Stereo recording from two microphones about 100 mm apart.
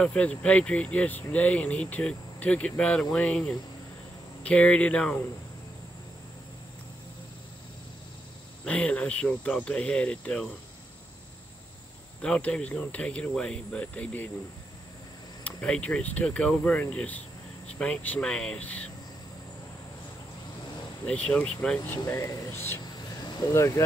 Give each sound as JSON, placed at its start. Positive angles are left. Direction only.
{"t": 0.0, "sound": "speech", "side_deg": 10}
{"t": 8.6, "sound": "speech", "side_deg": 10}
{"t": 12.2, "sound": "speech", "side_deg": 10}
{"t": 15.4, "sound": "speech", "side_deg": 10}
{"t": 21.1, "sound": "speech", "side_deg": 10}
{"t": 21.8, "sound": "speech", "side_deg": 25}